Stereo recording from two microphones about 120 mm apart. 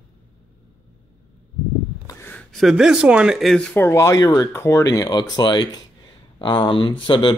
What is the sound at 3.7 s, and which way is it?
Speech, 20° left (ahead or behind).